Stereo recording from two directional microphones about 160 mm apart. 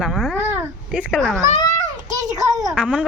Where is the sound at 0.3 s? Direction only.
10° right (ahead or behind).